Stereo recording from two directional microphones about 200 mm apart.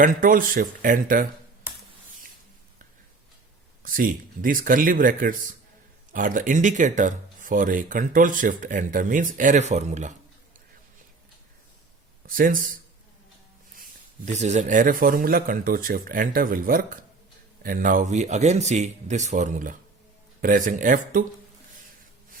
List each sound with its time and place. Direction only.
0.0 s speech: 45° right (ahead or behind)
3.8 s speech: 45° right (ahead or behind)
12.2 s speech: 45° right (ahead or behind)
14.3 s speech: 35° right (ahead or behind)